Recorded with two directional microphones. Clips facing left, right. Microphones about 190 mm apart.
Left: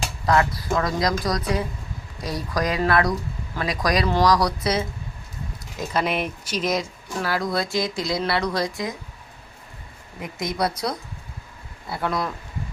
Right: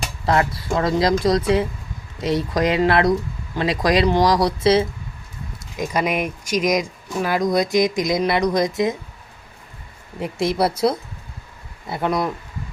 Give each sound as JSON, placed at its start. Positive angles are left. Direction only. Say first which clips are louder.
{"t": 0.3, "sound": "speech", "louder": "right 1 dB", "side_deg": -25}
{"t": 5.7, "sound": "speech", "louder": "right 3 dB", "side_deg": -15}
{"t": 10.6, "sound": "speech", "louder": "right 5 dB", "side_deg": -25}